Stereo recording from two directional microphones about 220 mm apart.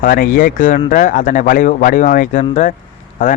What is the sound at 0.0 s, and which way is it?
Speech, 40° left (ahead or behind).